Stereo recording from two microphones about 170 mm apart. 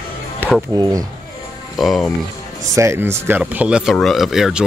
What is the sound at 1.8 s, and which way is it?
Speech, centre (ahead or behind).